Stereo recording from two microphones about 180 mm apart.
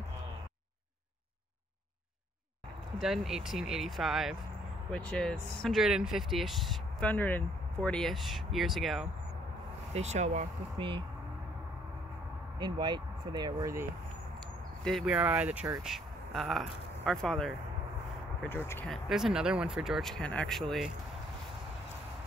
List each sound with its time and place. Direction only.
3.0 s speech: centre (ahead or behind)
9.9 s speech: 40° right (ahead or behind)
10.8 s speech: 30° right (ahead or behind)
12.5 s speech: 25° right (ahead or behind)
14.8 s speech: centre (ahead or behind)
18.9 s speech: centre (ahead or behind)